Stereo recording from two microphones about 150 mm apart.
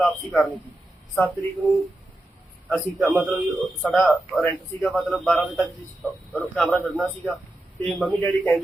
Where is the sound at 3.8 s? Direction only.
10° left (ahead or behind).